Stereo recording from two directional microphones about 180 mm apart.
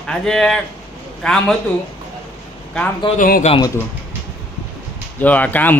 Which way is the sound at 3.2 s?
50° left (ahead or behind).